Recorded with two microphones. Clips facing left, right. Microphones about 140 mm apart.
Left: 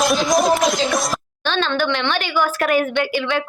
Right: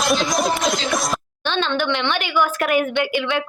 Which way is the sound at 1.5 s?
15° right (ahead or behind).